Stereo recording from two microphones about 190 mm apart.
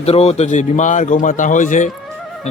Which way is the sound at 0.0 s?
35° left (ahead or behind).